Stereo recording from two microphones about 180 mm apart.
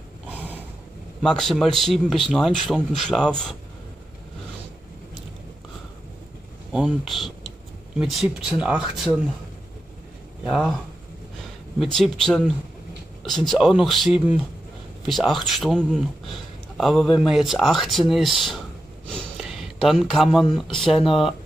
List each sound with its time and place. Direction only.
0.3 s a sound: 10° right (ahead or behind)
1.2 s speech: 5° left (ahead or behind)
6.7 s speech: 5° right (ahead or behind)
10.4 s speech: centre (ahead or behind)
11.8 s speech: centre (ahead or behind)